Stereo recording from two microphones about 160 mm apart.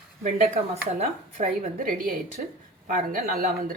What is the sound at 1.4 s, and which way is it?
Speech, 60° right (ahead or behind).